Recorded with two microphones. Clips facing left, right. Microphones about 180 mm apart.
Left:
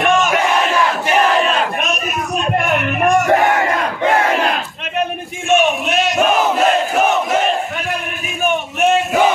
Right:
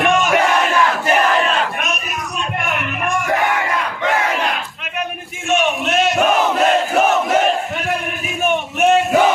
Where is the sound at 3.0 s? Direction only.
40° left (ahead or behind).